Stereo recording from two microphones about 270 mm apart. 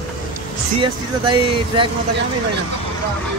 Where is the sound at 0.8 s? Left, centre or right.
Centre.